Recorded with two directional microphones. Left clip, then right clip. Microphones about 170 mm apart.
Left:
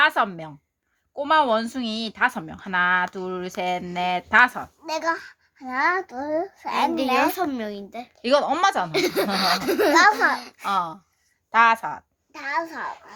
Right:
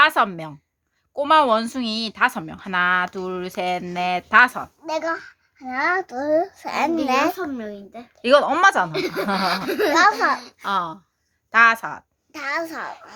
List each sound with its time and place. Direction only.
0.0 s a woman's voice: 30° right (ahead or behind); by 6.9 s 45° right (ahead or behind)
7.3 s a child's voice: 55° left (ahead or behind)
8.1 s a woman's voice: 25° right (ahead or behind)
8.9 s a child's voice: 65° left (ahead or behind); by 9.9 s 50° left (ahead or behind)
9.9 s a woman's voice: 25° right (ahead or behind)
12.3 s speech: 70° right (ahead or behind)